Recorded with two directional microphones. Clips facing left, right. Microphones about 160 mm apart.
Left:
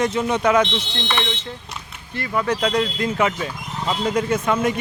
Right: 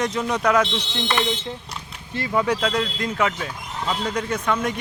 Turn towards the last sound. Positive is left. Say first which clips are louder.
# left 4 dB
turn(degrees=5)  # may be behind; listen again after turning